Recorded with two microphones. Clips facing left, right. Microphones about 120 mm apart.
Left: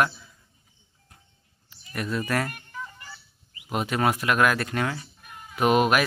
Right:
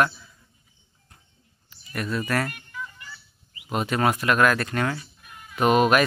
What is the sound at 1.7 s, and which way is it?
Speech, 15° left (ahead or behind).